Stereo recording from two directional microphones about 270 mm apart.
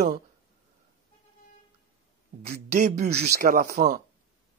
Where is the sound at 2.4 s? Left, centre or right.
Right.